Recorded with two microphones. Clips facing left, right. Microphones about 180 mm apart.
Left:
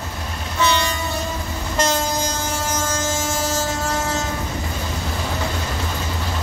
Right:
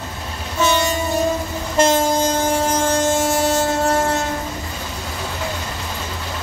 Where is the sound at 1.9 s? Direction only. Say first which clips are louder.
Right 6 dB; 50° right (ahead or behind).